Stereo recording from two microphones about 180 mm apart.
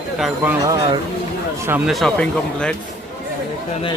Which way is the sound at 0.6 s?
20° right (ahead or behind).